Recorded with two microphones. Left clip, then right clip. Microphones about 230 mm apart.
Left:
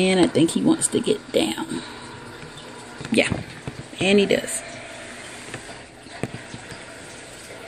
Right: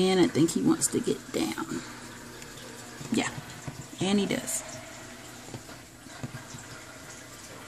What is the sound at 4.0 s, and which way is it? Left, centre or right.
Speech, centre.